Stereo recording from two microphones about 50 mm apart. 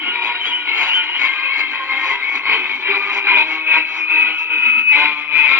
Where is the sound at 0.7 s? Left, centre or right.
Right.